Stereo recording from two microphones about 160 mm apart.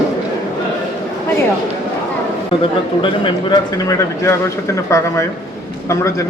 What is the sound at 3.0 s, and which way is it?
A man's voice, 30° left (ahead or behind).